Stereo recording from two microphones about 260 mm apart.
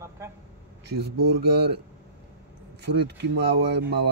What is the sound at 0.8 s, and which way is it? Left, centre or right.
Speech, right.